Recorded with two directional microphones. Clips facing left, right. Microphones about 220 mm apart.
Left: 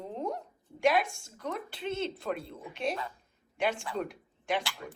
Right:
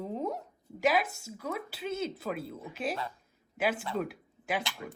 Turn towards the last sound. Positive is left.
turn(degrees=-5)  # may be behind; listen again after turning